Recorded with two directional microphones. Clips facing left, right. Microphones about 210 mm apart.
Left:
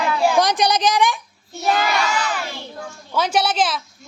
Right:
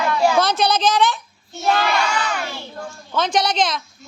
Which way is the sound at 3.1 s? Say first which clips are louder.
Even; 10° left (ahead or behind).